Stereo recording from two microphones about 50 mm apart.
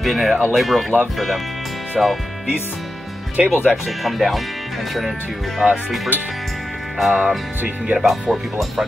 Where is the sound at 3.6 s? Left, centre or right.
Centre.